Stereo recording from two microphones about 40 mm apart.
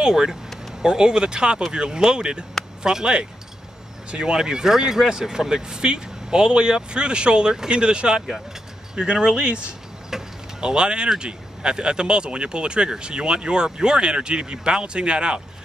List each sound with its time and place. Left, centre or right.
0.0 s speech: centre
10.1 s vehicle: right
11.1 s speech: right